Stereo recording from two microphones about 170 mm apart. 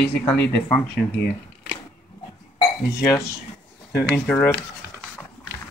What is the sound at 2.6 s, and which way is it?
Speech, 20° left (ahead or behind).